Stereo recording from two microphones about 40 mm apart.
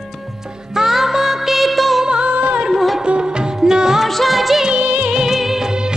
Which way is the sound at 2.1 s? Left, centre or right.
Right.